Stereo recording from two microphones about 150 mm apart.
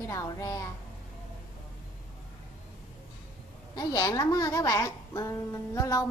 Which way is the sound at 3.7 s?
25° left (ahead or behind).